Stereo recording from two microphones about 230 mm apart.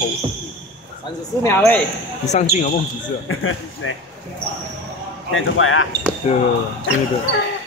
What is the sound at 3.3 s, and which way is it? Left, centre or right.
Speech, left.